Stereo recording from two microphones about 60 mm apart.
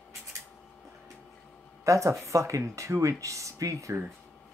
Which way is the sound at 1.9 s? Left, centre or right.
Right.